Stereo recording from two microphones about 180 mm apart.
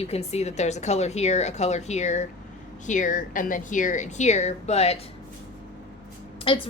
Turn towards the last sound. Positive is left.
turn(degrees=30)  # may be behind; listen again after turning